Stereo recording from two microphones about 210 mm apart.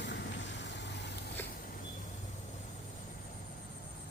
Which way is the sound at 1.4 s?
10° left (ahead or behind).